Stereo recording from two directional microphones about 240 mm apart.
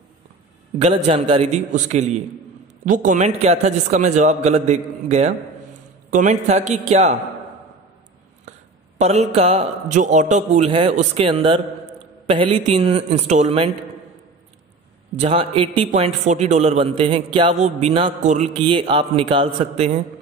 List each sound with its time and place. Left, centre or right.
0.7 s a man's voice: right
8.5 s a man's voice: right
15.1 s a man's voice: right